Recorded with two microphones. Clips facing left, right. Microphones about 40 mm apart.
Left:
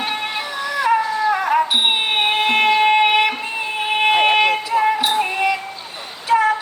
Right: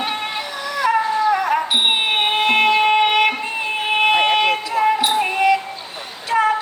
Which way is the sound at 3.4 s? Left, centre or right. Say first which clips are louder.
Right 1 dB; centre.